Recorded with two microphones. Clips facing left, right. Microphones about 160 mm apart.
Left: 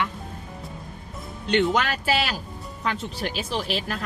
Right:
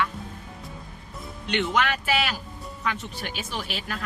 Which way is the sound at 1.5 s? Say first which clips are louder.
Left 3 dB; 35° left (ahead or behind).